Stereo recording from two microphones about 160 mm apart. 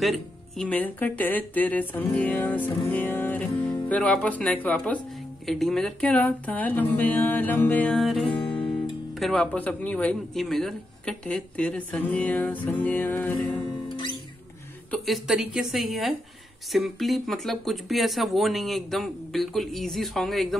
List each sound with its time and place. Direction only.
0.0 s a man's voice: centre (ahead or behind)
13.8 s music: 30° left (ahead or behind)
14.9 s speech: centre (ahead or behind)